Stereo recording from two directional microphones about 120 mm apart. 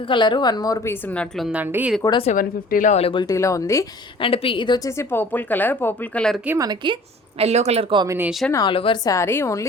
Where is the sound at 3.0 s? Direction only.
45° left (ahead or behind).